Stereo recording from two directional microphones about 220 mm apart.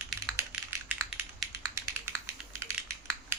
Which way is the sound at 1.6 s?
15° right (ahead or behind).